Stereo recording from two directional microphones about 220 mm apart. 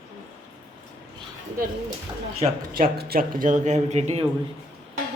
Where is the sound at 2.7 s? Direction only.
45° right (ahead or behind).